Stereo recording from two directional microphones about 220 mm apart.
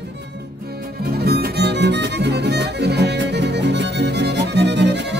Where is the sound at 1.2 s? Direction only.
45° right (ahead or behind).